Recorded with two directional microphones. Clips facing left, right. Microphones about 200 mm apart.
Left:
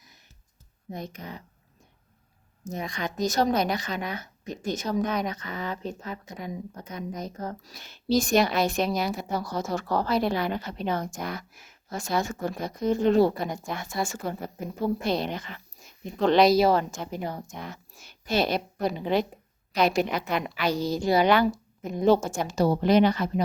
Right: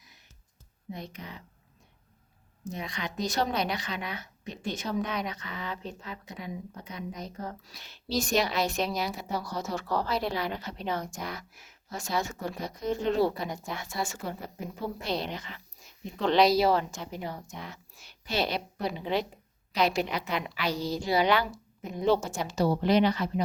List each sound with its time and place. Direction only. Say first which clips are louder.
0.9 s a woman's voice: left 3 dB; 45° left (ahead or behind)
2.6 s a woman's voice: left 4 dB; 45° left (ahead or behind)